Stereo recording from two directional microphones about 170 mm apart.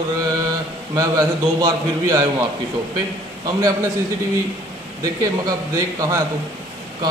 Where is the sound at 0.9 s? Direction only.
20° right (ahead or behind).